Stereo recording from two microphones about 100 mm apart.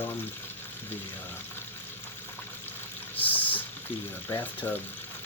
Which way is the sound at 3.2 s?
15° left (ahead or behind).